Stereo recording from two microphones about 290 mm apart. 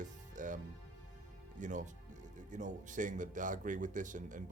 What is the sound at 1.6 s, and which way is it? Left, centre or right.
Speech, right.